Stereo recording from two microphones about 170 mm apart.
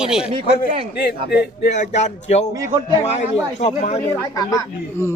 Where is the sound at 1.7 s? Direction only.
45° left (ahead or behind).